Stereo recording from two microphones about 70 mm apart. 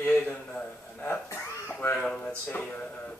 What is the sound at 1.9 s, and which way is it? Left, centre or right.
Speech, centre.